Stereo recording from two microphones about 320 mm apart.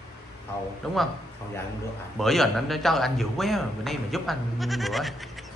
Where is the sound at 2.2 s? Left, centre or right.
Centre.